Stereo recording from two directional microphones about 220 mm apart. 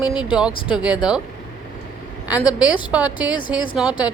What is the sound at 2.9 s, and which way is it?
Speech, 5° right (ahead or behind).